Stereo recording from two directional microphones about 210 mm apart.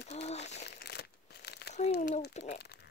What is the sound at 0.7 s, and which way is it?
Crumpling, 50° left (ahead or behind).